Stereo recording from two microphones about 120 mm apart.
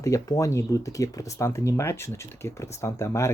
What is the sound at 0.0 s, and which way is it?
Speech, 30° left (ahead or behind).